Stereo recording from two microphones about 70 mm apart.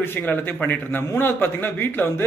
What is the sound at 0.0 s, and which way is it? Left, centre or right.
A man's voice, left.